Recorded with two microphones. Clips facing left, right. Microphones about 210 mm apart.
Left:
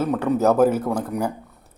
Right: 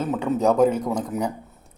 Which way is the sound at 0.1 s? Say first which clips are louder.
Even; centre (ahead or behind).